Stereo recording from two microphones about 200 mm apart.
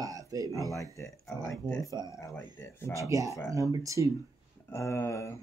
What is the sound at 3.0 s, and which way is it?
Speech, 15° right (ahead or behind).